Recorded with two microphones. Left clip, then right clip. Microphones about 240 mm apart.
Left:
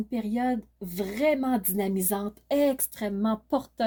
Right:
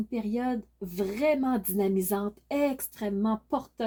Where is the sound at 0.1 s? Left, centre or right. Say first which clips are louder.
Left 3 dB; left.